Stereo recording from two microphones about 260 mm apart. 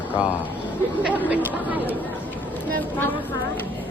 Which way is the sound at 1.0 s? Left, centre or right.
Centre.